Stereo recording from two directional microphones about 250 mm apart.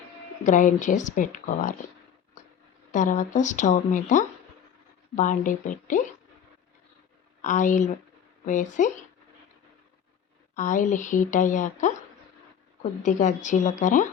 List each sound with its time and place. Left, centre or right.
0.4 s speech: left
2.9 s speech: left
7.4 s speech: left
10.5 s speech: left